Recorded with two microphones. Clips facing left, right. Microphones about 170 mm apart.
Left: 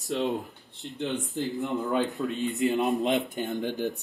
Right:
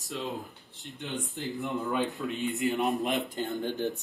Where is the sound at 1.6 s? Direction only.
20° left (ahead or behind).